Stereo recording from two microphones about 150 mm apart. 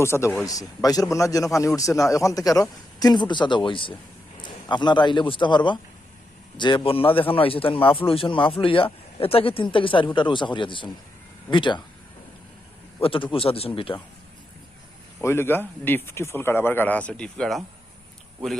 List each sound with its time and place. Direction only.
0.0 s a man's voice: 15° left (ahead or behind); by 11.8 s 30° left (ahead or behind)
13.0 s speech: 35° left (ahead or behind)
15.2 s speech: 15° left (ahead or behind)